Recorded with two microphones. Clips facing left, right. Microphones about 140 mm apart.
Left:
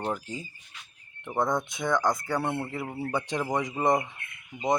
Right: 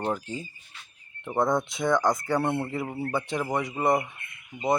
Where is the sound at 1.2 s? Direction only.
5° right (ahead or behind).